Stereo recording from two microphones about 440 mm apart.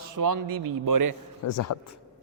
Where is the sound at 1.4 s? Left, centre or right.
Left.